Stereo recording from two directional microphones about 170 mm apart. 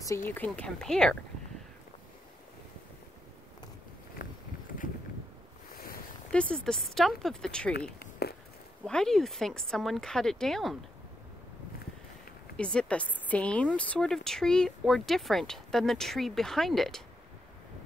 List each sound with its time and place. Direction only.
0.3 s speech: 10° left (ahead or behind)
4.2 s a sound: 55° left (ahead or behind)
6.3 s speech: 5° left (ahead or behind)
8.0 s a sound: 65° left (ahead or behind)
8.8 s speech: 5° left (ahead or behind)
12.5 s speech: 5° left (ahead or behind)